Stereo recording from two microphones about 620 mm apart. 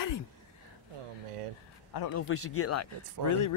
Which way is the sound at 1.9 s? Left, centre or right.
Left.